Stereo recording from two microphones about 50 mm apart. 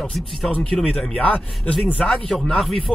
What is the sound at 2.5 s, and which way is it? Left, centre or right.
Speech, centre.